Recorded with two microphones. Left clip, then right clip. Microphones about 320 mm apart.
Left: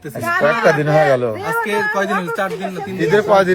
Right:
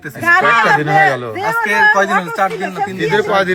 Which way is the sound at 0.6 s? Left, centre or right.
Left.